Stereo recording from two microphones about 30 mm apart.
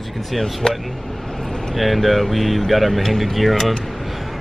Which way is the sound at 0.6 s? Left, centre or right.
Left.